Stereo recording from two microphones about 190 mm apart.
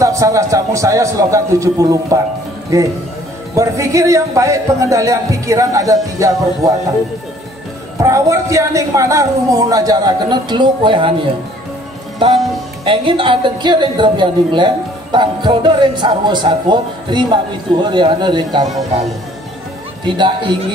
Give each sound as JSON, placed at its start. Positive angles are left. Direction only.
{"t": 0.0, "sound": "speech", "side_deg": -15}
{"t": 8.0, "sound": "a woman's voice", "side_deg": -15}
{"t": 12.2, "sound": "a woman's voice", "side_deg": -25}
{"t": 18.7, "sound": "speech", "side_deg": 0}